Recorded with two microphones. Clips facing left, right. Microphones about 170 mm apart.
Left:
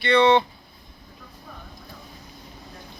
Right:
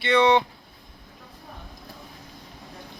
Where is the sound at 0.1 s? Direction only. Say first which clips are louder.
Left 1 dB; 15° right (ahead or behind).